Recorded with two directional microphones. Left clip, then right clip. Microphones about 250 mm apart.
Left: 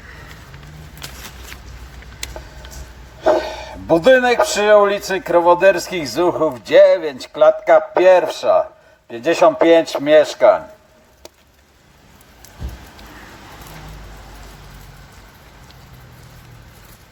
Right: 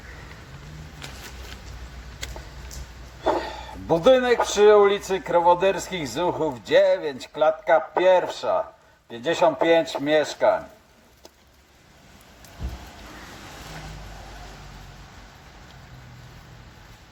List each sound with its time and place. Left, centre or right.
3.8 s speech: left
5.9 s a man's voice: centre
6.1 s speech: left